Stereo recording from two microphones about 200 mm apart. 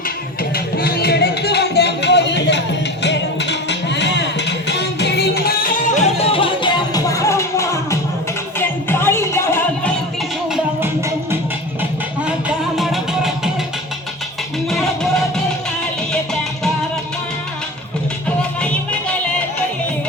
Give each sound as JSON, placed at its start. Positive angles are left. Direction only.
{"t": 0.5, "sound": "music", "side_deg": 50}
{"t": 11.8, "sound": "music", "side_deg": -5}
{"t": 14.7, "sound": "music", "side_deg": 0}
{"t": 18.3, "sound": "music", "side_deg": 5}